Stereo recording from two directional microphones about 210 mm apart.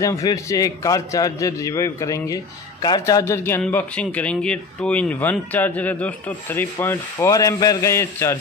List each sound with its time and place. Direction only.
0.0 s a man's voice: 15° left (ahead or behind)